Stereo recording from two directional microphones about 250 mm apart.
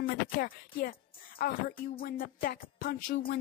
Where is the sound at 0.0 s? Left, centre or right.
Left.